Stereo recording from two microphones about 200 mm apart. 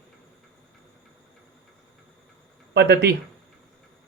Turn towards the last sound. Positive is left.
turn(degrees=-55)  # may be behind; listen again after turning